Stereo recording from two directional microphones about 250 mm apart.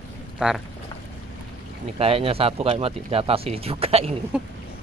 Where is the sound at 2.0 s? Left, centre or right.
Right.